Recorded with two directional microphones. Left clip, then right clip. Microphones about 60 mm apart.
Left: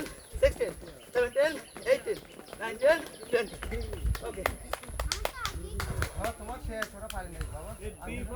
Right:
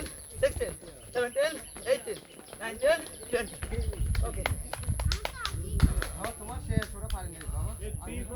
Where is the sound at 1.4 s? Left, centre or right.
Left.